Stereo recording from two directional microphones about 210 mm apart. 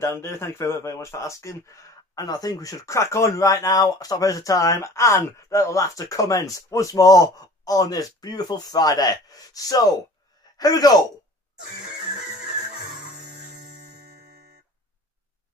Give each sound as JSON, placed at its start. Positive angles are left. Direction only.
{"t": 0.0, "sound": "speech", "side_deg": 10}